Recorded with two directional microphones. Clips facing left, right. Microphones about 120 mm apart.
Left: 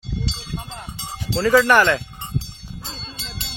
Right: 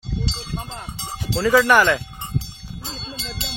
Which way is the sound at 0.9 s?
10° right (ahead or behind).